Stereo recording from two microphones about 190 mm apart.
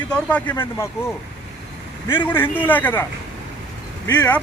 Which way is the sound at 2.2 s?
10° left (ahead or behind).